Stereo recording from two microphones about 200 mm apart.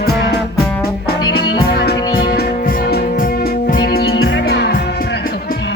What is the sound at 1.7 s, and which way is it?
Music, 50° left (ahead or behind).